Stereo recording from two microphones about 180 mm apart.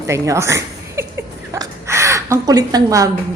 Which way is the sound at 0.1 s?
15° right (ahead or behind).